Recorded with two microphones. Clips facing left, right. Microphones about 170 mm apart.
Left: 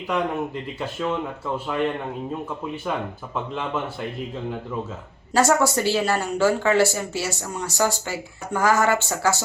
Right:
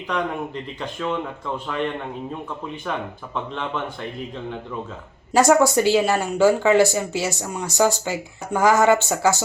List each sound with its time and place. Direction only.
0.8 s speech: 5° left (ahead or behind)
3.3 s speech: 5° left (ahead or behind)
5.3 s speech: 15° right (ahead or behind)